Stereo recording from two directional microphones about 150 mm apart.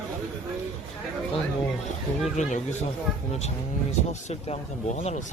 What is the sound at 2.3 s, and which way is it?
Speech, 50° left (ahead or behind).